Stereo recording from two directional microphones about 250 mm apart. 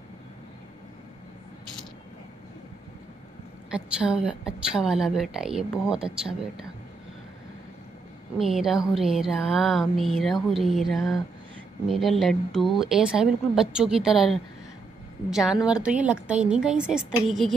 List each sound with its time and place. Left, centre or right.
3.7 s a woman's voice: centre
8.4 s a woman's voice: centre